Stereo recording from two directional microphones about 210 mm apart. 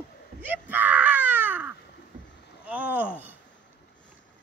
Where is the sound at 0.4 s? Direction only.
10° right (ahead or behind).